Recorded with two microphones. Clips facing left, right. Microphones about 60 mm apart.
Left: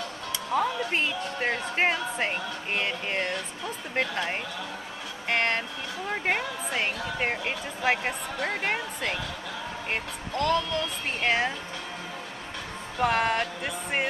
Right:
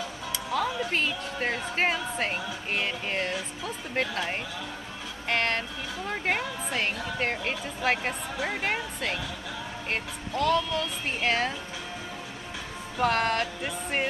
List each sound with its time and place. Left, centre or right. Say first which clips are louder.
0.7 s speech: even; centre
12.9 s speech: left 1 dB; centre